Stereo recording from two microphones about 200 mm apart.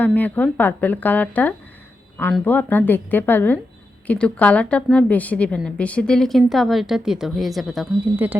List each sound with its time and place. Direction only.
0.0 s a woman's voice: 10° left (ahead or behind); by 8.4 s 10° right (ahead or behind)